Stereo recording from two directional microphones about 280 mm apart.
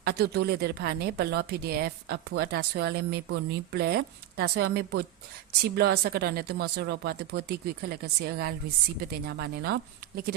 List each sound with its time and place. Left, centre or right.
0.0 s a woman's voice: right